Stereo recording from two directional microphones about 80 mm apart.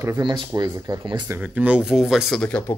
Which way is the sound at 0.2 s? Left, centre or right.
Right.